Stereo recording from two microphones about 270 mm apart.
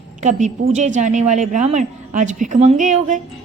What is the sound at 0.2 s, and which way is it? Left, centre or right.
A woman's voice, right.